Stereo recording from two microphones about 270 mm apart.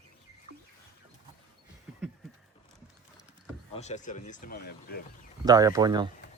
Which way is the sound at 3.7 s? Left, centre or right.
Left.